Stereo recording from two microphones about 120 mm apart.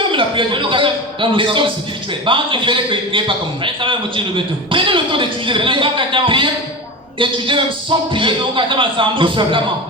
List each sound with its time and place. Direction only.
0.0 s a man's voice: 45° right (ahead or behind)